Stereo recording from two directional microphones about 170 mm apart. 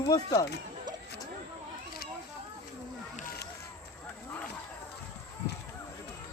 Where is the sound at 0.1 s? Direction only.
20° left (ahead or behind).